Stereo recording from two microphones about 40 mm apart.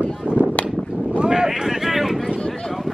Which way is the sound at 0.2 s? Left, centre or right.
Left.